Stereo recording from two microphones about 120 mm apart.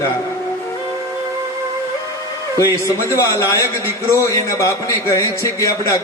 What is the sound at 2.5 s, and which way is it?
A man's voice, 25° left (ahead or behind).